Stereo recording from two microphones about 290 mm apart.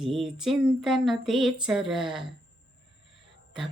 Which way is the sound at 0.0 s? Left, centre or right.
Centre.